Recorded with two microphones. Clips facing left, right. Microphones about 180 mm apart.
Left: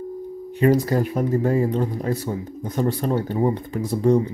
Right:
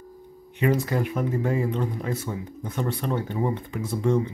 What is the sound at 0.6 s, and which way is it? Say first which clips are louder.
Speech: left 5 dB; 35° left (ahead or behind).